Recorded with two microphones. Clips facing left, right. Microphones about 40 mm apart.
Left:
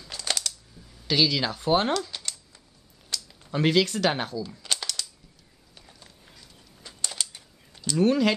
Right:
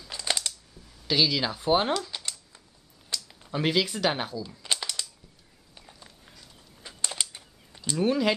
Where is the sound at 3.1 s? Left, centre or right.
Centre.